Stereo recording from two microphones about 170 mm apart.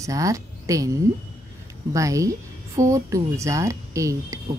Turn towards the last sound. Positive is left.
turn(degrees=-20)  # may be behind; listen again after turning